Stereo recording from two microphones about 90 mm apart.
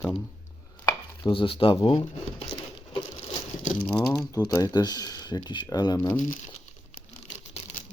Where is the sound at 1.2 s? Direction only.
75° left (ahead or behind); by 2.0 s 60° left (ahead or behind).